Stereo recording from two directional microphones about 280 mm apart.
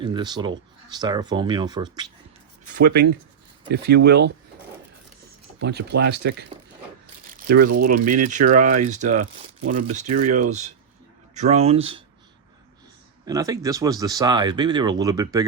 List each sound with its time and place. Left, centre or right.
0.0 s speech: centre
2.8 s speech: right
5.5 s speech: right
7.4 s speech: right
7.7 s speech: right
8.3 s speech: right
11.3 s speech: right
13.2 s speech: centre